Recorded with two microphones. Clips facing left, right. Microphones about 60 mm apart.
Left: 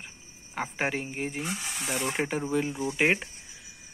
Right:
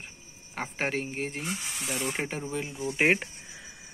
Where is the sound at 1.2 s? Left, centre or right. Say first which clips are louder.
Left 1 dB; centre.